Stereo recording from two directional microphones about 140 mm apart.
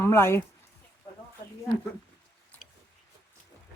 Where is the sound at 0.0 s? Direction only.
20° left (ahead or behind).